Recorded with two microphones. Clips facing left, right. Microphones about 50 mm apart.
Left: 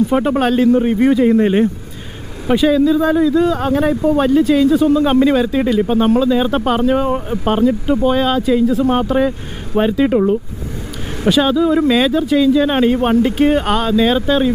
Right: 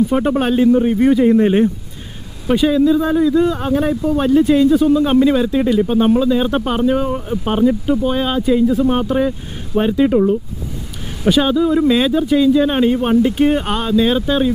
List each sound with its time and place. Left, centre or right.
0.4 s speech: centre
0.7 s speech: centre
3.9 s speech: centre
4.3 s speech: centre
7.0 s speech: centre
7.4 s speech: centre
8.1 s speech: centre
10.0 s speech: centre
11.2 s speech: centre
12.6 s speech: centre
13.7 s speech: centre